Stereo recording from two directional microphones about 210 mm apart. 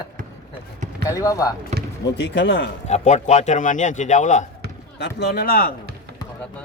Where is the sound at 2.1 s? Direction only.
55° left (ahead or behind).